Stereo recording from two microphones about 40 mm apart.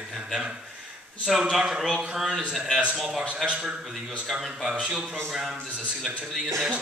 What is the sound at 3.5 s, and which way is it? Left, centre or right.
Speech, centre.